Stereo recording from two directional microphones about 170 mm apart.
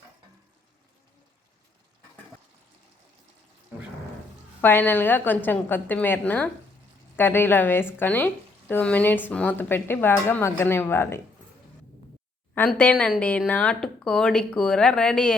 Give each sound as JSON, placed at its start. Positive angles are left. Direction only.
{"t": 4.6, "sound": "a woman's voice", "side_deg": 10}
{"t": 12.5, "sound": "speech", "side_deg": 10}